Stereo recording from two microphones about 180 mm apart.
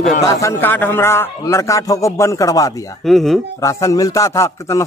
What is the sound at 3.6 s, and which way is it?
A man's voice, 20° left (ahead or behind).